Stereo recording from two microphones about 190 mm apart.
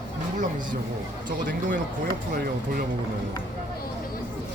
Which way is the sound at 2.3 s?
50° right (ahead or behind).